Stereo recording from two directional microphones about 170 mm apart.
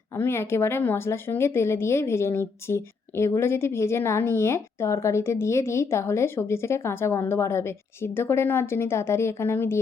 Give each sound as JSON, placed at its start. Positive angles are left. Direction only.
{"t": 0.2, "sound": "speech", "side_deg": 15}